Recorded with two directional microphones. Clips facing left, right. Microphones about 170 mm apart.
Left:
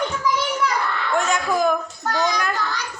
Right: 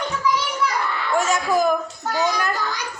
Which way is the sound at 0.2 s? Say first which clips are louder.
Right 2 dB; 45° left (ahead or behind).